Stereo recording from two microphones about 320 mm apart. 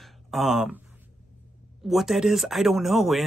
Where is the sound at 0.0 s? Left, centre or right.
Centre.